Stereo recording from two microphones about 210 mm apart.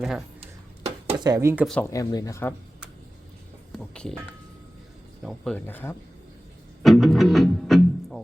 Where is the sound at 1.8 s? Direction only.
15° left (ahead or behind).